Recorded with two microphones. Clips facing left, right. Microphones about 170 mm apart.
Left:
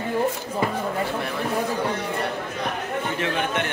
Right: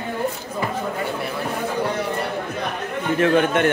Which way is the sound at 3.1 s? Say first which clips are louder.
Right 11 dB; 50° right (ahead or behind).